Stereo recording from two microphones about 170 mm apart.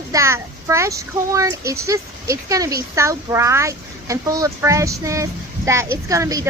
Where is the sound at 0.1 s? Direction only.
15° right (ahead or behind).